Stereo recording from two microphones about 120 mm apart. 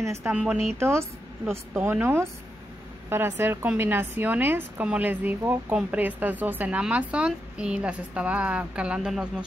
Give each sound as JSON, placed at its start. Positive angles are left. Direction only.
{"t": 0.0, "sound": "speech", "side_deg": -25}
{"t": 0.3, "sound": "a woman's voice", "side_deg": -10}
{"t": 0.7, "sound": "a woman's voice", "side_deg": -20}